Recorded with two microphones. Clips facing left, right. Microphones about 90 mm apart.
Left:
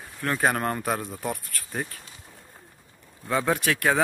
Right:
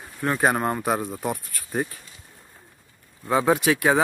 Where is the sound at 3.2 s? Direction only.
15° right (ahead or behind).